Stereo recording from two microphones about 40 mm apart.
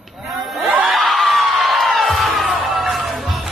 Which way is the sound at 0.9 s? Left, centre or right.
Centre.